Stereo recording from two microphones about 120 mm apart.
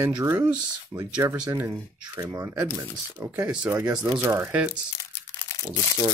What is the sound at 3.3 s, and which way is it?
Speech, 10° right (ahead or behind).